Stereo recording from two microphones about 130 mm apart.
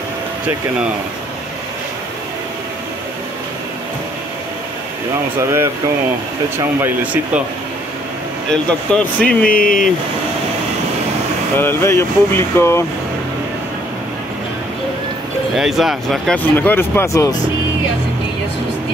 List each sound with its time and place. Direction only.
5.4 s speech: 20° right (ahead or behind)
6.8 s speech: 10° right (ahead or behind)
8.5 s speech: 10° left (ahead or behind)
9.5 s speech: 90° left
11.5 s speech: 15° left (ahead or behind)
15.5 s speech: centre (ahead or behind)
16.4 s speech: 15° left (ahead or behind)